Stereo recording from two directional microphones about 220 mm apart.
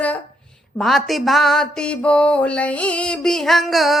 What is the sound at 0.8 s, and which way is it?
Music, centre (ahead or behind).